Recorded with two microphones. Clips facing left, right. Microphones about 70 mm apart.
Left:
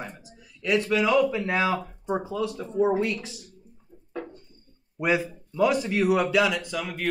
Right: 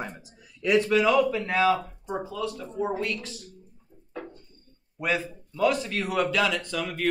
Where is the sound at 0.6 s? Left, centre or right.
Centre.